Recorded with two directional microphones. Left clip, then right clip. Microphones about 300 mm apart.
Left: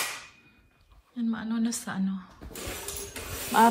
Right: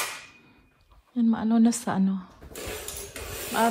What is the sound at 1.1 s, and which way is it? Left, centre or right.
Speech, centre.